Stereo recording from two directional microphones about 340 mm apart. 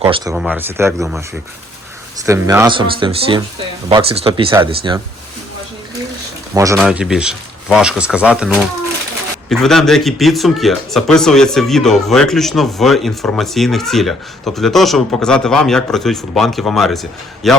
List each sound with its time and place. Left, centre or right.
0.0 s speech: centre
0.3 s a man's voice: centre
2.2 s speech: centre
6.5 s a man's voice: centre